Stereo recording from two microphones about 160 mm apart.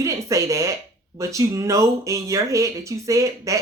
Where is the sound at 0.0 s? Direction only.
20° right (ahead or behind).